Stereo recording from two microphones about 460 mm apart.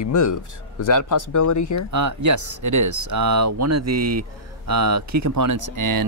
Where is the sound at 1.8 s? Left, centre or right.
Right.